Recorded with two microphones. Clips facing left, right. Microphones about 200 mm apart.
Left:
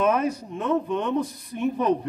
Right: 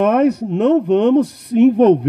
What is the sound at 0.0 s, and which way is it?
A man's voice, 65° right (ahead or behind).